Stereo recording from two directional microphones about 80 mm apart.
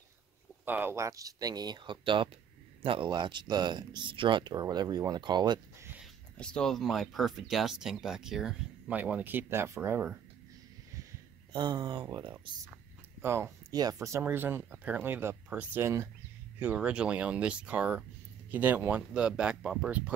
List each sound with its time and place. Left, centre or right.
0.7 s speech: right
0.9 s speech: right
4.6 s speech: right
6.3 s speech: centre
8.9 s speech: centre
11.5 s speech: right
13.2 s speech: right
13.7 s speech: right
14.2 s speech: right; by 19.9 s centre